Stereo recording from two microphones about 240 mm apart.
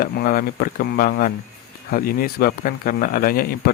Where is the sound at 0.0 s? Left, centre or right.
Left.